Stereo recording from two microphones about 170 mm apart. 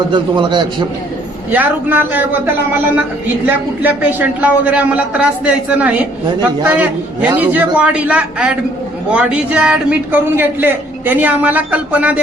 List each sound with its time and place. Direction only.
0.1 s a man's voice: 30° right (ahead or behind)
1.5 s a man's voice: 10° right (ahead or behind)
3.8 s a man's voice: 10° right (ahead or behind)